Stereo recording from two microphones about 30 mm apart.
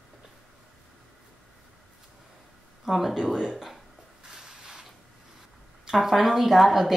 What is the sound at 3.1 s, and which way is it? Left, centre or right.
Speech, centre.